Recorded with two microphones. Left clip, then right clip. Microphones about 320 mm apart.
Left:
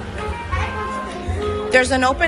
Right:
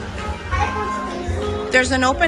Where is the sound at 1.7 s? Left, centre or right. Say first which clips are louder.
Left 1 dB; centre.